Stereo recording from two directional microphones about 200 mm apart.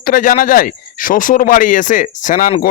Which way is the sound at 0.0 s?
45° left (ahead or behind).